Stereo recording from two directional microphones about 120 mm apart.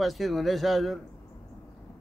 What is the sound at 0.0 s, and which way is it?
Speech, centre (ahead or behind).